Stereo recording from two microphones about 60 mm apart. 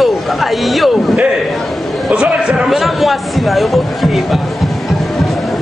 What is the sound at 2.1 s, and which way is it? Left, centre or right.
Speech, centre.